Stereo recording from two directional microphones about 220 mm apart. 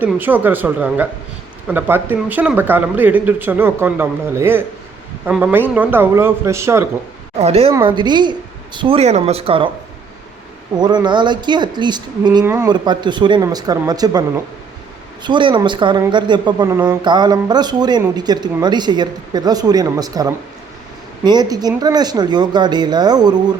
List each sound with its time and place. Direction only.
0.0 s speech: 10° right (ahead or behind)
7.3 s speech: 25° right (ahead or behind)
7.7 s speech: 15° right (ahead or behind)
10.8 s speech: 20° right (ahead or behind)